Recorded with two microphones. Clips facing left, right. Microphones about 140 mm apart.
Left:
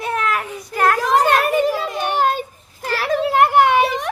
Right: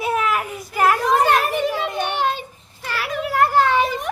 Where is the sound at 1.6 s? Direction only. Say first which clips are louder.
Left 2 dB; 45° left (ahead or behind); by 3.8 s 20° left (ahead or behind).